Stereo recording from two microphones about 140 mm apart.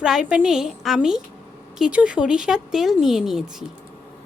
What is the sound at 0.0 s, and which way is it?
Speech, 5° right (ahead or behind).